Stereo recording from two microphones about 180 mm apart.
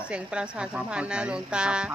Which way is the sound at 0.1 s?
5° right (ahead or behind).